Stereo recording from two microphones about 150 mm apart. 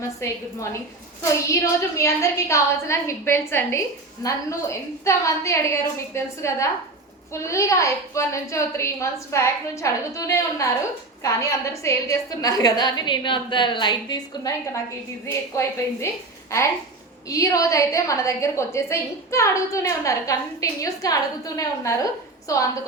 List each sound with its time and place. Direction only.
0.0 s a woman's voice: 20° left (ahead or behind)
17.2 s a woman's voice: 20° left (ahead or behind)